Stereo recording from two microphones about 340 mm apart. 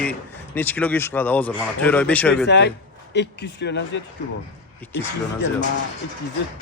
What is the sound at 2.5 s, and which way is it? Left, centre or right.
Speech, left.